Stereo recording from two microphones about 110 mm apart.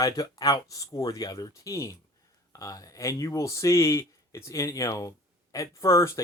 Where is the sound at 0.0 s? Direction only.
35° left (ahead or behind).